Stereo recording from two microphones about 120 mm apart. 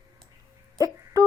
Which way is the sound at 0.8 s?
30° right (ahead or behind).